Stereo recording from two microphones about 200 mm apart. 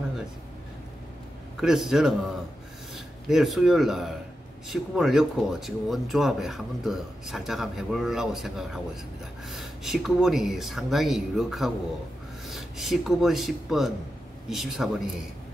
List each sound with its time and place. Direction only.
1.6 s speech: centre (ahead or behind)
3.3 s speech: centre (ahead or behind)